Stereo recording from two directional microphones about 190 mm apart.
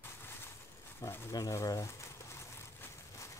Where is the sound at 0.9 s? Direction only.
15° left (ahead or behind).